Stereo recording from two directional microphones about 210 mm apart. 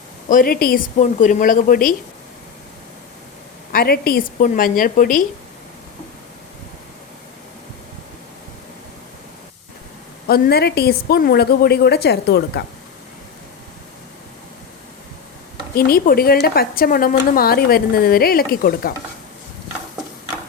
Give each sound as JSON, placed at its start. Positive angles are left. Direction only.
{"t": 0.3, "sound": "a woman's voice", "side_deg": 40}
{"t": 3.7, "sound": "a woman's voice", "side_deg": 45}
{"t": 10.2, "sound": "a woman's voice", "side_deg": 45}
{"t": 15.7, "sound": "a woman's voice", "side_deg": 45}